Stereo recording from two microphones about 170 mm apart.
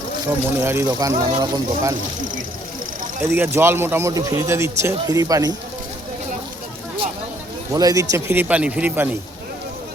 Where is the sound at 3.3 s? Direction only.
10° right (ahead or behind).